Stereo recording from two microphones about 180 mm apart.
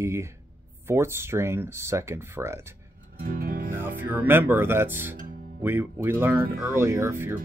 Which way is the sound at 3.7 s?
10° right (ahead or behind).